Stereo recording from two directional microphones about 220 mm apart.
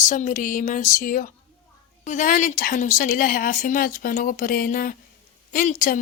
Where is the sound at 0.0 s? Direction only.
35° left (ahead or behind).